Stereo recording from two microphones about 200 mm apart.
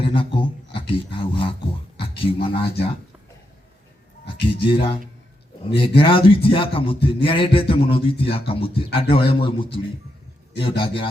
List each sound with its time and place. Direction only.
0.0 s music: 25° left (ahead or behind)
2.1 s speech: 25° left (ahead or behind)
4.4 s a man's voice: 25° left (ahead or behind)